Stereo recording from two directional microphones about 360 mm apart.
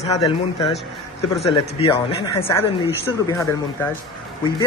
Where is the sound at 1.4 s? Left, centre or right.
Centre.